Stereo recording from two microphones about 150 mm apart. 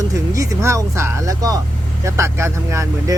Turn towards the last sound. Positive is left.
turn(degrees=-20)  # may be behind; listen again after turning